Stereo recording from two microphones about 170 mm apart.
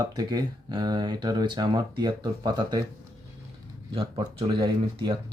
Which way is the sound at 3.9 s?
30° right (ahead or behind).